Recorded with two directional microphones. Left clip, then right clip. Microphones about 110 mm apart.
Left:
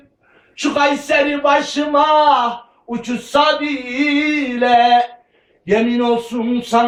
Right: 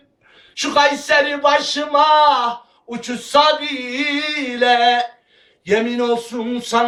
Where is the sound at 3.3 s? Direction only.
45° right (ahead or behind).